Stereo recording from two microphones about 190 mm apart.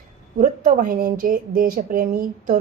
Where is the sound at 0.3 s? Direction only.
45° right (ahead or behind).